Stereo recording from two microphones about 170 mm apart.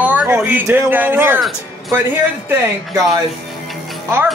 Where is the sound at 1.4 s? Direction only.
Centre (ahead or behind).